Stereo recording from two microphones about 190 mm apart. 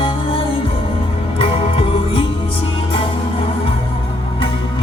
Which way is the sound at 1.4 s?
30° left (ahead or behind).